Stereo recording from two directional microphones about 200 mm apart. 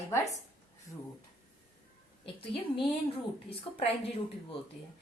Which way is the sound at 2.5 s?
25° left (ahead or behind).